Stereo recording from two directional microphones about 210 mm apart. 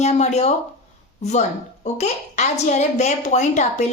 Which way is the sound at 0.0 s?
30° left (ahead or behind).